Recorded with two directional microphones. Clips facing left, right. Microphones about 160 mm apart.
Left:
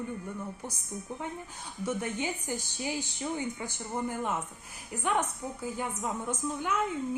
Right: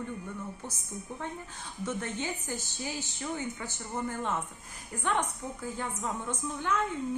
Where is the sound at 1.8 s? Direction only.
10° left (ahead or behind).